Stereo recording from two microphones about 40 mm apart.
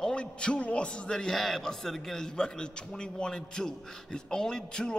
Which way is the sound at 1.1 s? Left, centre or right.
Centre.